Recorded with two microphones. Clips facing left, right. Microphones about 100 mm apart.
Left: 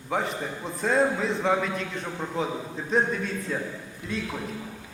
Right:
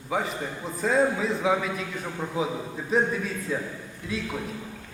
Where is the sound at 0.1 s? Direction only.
Centre (ahead or behind).